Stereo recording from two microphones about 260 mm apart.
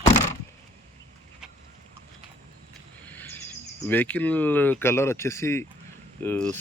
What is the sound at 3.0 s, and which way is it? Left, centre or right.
Speech, centre.